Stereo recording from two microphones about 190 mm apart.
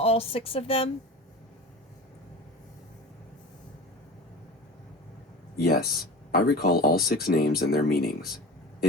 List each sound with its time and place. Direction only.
0.0 s a woman's voice: 30° left (ahead or behind)
5.5 s speech: 55° left (ahead or behind)